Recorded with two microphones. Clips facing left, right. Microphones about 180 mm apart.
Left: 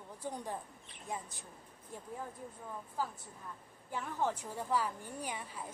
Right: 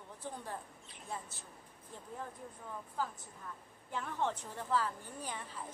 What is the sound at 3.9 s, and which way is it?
A woman's voice, 5° left (ahead or behind).